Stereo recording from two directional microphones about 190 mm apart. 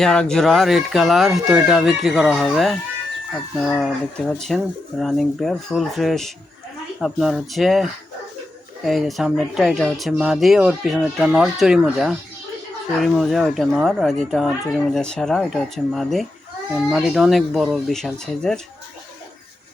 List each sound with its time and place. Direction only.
0.0 s speech: 5° left (ahead or behind)